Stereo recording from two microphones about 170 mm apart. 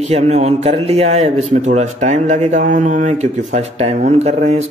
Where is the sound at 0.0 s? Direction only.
40° right (ahead or behind).